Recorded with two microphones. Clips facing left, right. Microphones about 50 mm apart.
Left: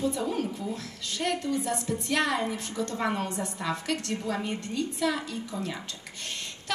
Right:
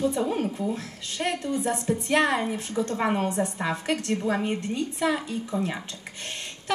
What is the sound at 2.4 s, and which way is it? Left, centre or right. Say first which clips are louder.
Speech: right 2 dB; centre.